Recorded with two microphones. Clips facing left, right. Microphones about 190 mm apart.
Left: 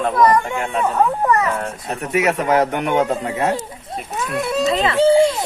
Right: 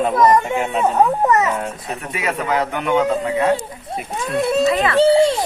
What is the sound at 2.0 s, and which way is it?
Speech, 45° left (ahead or behind).